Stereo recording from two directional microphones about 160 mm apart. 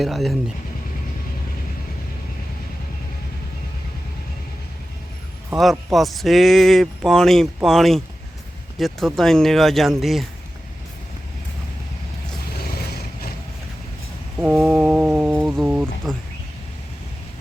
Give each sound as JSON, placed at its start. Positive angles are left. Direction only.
{"t": 0.0, "sound": "speech", "side_deg": 0}
{"t": 5.5, "sound": "speech", "side_deg": 0}
{"t": 12.5, "sound": "vehicle", "side_deg": 80}
{"t": 14.3, "sound": "a sound", "side_deg": -5}
{"t": 15.6, "sound": "speech", "side_deg": -10}